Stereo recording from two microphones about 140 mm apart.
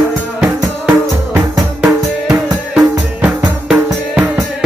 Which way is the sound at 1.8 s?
5° right (ahead or behind).